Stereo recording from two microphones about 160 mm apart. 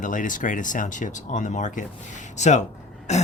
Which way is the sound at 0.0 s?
55° left (ahead or behind).